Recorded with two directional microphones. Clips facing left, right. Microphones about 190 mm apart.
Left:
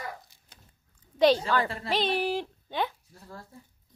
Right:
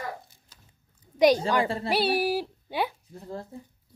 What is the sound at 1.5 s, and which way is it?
Speech, 25° right (ahead or behind).